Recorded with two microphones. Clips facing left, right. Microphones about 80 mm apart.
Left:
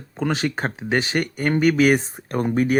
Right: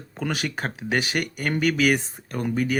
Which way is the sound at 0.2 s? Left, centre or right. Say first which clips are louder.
Left 5 dB; left.